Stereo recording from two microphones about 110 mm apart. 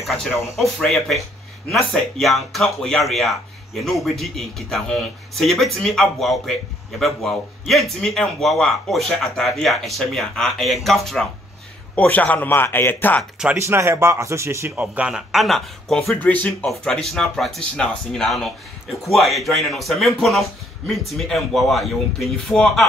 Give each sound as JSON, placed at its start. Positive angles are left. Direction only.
{"t": 0.0, "sound": "speech", "side_deg": 0}
{"t": 11.9, "sound": "a man's voice", "side_deg": 15}
{"t": 13.2, "sound": "speech", "side_deg": -5}
{"t": 13.6, "sound": "speech", "side_deg": -25}
{"t": 14.8, "sound": "speech", "side_deg": -10}
{"t": 16.2, "sound": "a man's voice", "side_deg": 15}
{"t": 16.6, "sound": "speech", "side_deg": 5}